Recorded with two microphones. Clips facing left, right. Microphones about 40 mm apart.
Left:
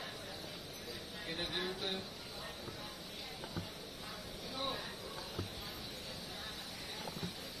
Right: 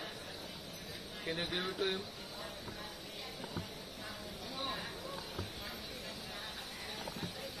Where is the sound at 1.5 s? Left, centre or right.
Right.